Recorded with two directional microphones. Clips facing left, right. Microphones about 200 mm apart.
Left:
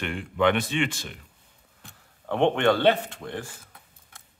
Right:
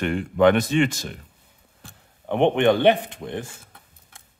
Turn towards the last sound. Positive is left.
turn(degrees=-20)  # may be behind; listen again after turning